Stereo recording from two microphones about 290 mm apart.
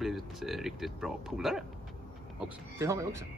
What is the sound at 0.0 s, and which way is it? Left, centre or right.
A man's voice, centre.